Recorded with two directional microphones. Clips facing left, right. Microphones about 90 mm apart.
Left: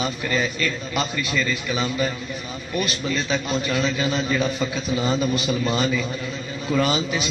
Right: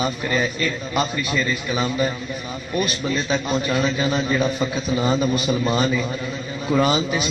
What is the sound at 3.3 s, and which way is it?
A man's voice, 35° right (ahead or behind).